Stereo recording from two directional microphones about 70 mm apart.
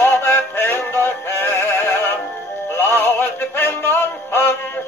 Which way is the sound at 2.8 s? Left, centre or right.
Left.